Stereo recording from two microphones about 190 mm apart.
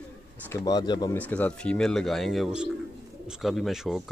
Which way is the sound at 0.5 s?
20° left (ahead or behind).